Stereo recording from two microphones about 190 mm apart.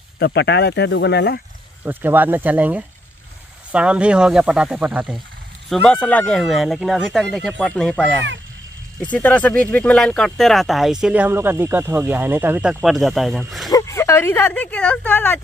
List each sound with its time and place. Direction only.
0.2 s speech: 65° left (ahead or behind)
1.9 s speech: 10° right (ahead or behind)
5.7 s speech: 5° left (ahead or behind)
13.7 s speech: 15° left (ahead or behind)